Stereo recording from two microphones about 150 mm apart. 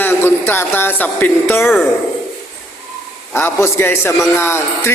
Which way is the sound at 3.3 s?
15° left (ahead or behind).